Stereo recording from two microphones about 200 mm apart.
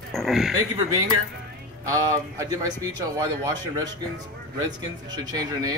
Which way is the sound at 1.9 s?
15° right (ahead or behind).